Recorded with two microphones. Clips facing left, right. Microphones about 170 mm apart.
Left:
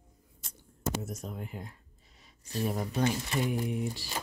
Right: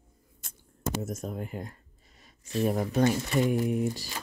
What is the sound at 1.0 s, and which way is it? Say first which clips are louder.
Speech: right 5 dB; 45° right (ahead or behind).